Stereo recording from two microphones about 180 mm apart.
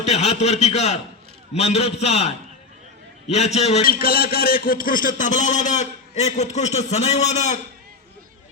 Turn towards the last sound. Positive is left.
turn(degrees=40)  # may be behind; listen again after turning